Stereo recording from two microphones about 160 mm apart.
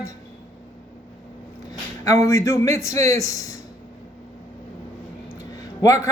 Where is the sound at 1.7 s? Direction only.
20° left (ahead or behind).